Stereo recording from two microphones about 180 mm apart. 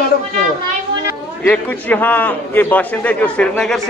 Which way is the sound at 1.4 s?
10° left (ahead or behind).